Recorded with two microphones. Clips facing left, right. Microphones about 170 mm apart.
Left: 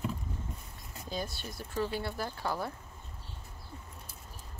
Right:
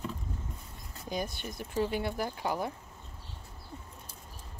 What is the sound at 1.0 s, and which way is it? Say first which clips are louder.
Speech: right 3 dB; 20° right (ahead or behind).